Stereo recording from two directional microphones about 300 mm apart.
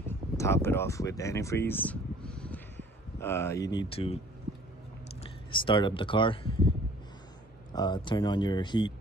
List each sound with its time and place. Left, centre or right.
0.4 s speech: centre
5.5 s speech: centre
7.7 s speech: centre